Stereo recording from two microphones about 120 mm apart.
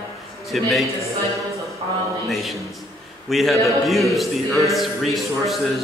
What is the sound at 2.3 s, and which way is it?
A man's voice, centre (ahead or behind).